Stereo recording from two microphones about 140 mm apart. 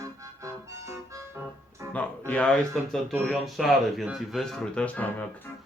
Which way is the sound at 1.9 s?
10° left (ahead or behind).